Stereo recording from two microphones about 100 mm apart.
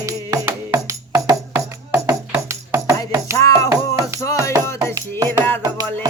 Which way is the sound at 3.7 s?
35° right (ahead or behind).